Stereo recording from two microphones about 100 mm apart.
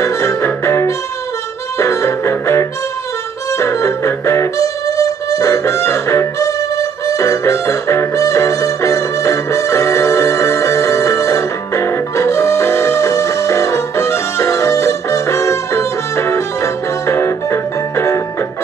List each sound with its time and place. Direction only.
0.0 s music: 30° left (ahead or behind)